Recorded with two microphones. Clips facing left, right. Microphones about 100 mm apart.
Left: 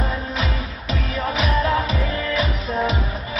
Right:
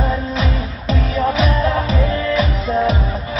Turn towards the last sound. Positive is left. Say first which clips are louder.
# right 5 dB
turn(degrees=-30)  # may be behind; listen again after turning